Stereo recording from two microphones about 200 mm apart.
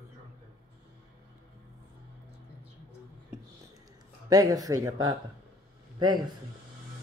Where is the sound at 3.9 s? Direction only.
20° right (ahead or behind).